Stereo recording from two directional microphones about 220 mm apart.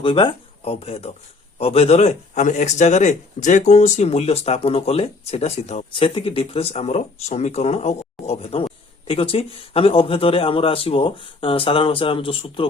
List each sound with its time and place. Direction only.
0.0 s speech: 25° left (ahead or behind)